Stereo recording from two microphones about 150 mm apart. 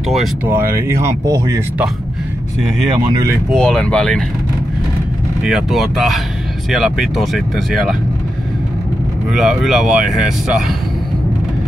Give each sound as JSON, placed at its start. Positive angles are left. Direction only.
{"t": 0.5, "sound": "speech", "side_deg": -15}
{"t": 3.1, "sound": "speech", "side_deg": -25}
{"t": 3.5, "sound": "speech", "side_deg": 5}
{"t": 5.4, "sound": "speech", "side_deg": -5}
{"t": 9.3, "sound": "speech", "side_deg": 0}